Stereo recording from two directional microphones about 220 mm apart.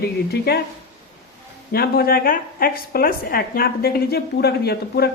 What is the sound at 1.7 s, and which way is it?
A woman's voice, 45° left (ahead or behind).